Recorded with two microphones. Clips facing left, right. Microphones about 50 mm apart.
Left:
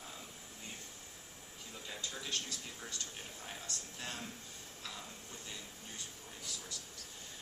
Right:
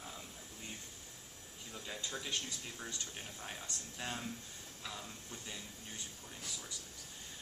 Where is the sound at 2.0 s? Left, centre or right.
Right.